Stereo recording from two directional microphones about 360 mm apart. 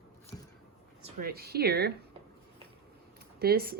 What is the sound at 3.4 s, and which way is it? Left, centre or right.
Speech, right.